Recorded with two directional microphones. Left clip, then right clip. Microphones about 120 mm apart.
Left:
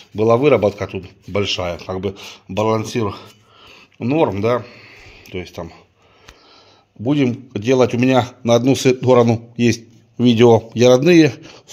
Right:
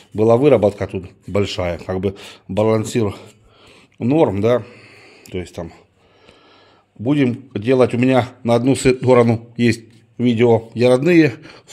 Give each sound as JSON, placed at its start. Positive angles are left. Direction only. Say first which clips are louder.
{"t": 0.3, "sound": "speech", "louder": "right 1 dB", "side_deg": -30}
{"t": 1.4, "sound": "speech", "louder": "left 1 dB", "side_deg": -60}
{"t": 3.6, "sound": "a sound", "louder": "right 2 dB", "side_deg": -30}
{"t": 7.1, "sound": "speech", "louder": "even", "side_deg": -5}
{"t": 10.1, "sound": "a man's voice", "louder": "left 3 dB", "side_deg": 25}
{"t": 10.4, "sound": "a man's voice", "louder": "left 3 dB", "side_deg": 35}
{"t": 10.9, "sound": "speech", "louder": "left 2 dB", "side_deg": 15}